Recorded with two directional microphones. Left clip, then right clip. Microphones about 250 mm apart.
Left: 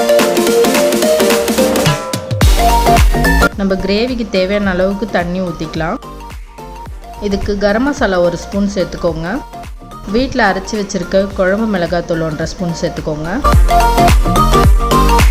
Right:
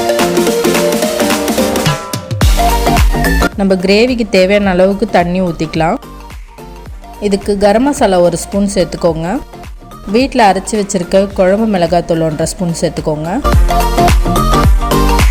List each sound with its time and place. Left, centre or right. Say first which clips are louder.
0.1 s music: left 1 dB; centre
1.8 s drum: left 1 dB; centre
2.9 s music: left 2 dB; centre
3.6 s speech: right 5 dB; right
7.2 s speech: right 4 dB; right
13.5 s music: left 5 dB; centre